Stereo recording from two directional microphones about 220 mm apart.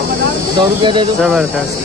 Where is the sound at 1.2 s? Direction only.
5° right (ahead or behind).